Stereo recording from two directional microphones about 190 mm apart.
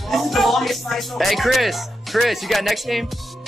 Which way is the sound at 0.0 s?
Centre (ahead or behind).